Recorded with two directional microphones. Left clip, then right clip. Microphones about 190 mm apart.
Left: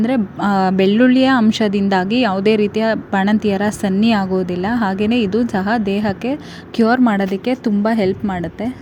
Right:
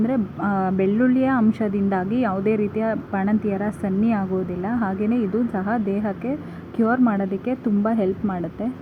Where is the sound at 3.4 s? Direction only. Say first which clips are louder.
Left 7 dB; 60° left (ahead or behind).